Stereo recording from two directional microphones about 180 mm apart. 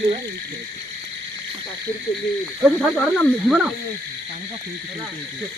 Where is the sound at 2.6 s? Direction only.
Centre (ahead or behind).